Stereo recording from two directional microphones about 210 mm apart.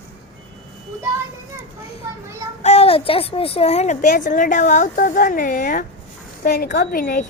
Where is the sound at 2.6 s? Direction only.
30° left (ahead or behind).